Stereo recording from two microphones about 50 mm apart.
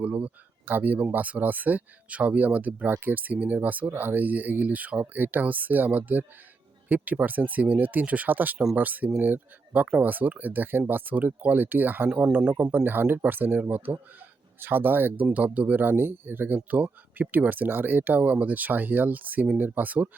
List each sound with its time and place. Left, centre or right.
0.0 s speech: right
0.6 s speech: right